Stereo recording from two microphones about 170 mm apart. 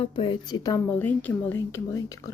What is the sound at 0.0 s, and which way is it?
Speech, 30° left (ahead or behind).